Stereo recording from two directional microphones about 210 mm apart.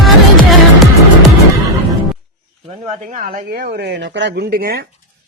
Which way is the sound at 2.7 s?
35° right (ahead or behind).